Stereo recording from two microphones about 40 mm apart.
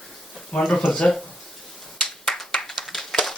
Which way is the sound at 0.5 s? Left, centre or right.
Left.